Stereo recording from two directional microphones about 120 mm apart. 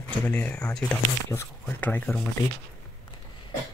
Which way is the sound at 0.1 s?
10° left (ahead or behind).